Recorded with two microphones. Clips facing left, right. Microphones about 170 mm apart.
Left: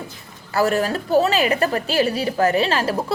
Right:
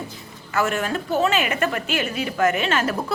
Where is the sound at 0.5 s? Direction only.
35° left (ahead or behind).